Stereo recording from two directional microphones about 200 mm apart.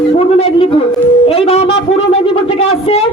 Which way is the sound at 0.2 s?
30° left (ahead or behind).